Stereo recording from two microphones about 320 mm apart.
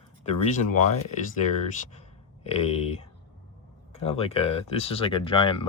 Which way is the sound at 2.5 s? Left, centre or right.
Centre.